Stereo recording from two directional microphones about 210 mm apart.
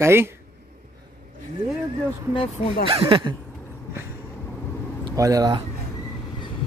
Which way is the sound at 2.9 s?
25° right (ahead or behind).